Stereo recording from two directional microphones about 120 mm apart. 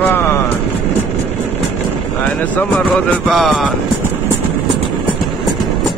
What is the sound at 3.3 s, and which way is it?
Music, centre (ahead or behind).